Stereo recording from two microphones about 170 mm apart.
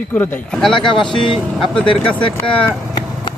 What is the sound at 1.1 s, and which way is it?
Speech, 30° left (ahead or behind).